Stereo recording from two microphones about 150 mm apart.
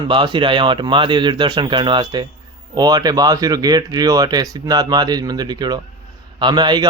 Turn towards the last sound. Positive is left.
turn(degrees=-30)  # may be behind; listen again after turning